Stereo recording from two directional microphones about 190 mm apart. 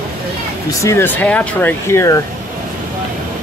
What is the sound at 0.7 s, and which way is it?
Speech, 15° left (ahead or behind).